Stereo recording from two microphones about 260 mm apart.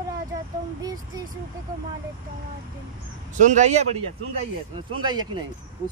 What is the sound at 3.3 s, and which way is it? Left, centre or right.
Speech, right.